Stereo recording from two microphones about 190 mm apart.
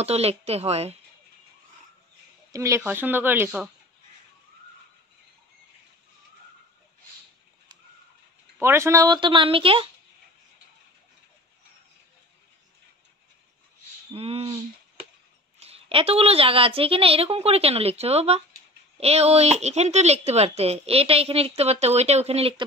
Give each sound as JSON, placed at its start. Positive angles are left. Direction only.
{"t": 0.0, "sound": "speech", "side_deg": -35}
{"t": 2.5, "sound": "speech", "side_deg": -15}
{"t": 8.5, "sound": "speech", "side_deg": -15}
{"t": 14.1, "sound": "speech", "side_deg": -30}
{"t": 15.6, "sound": "speech", "side_deg": -30}